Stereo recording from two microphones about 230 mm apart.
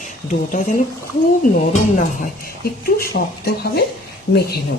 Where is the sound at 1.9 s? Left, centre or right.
Left.